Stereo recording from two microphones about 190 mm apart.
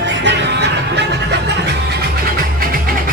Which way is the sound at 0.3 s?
65° right (ahead or behind).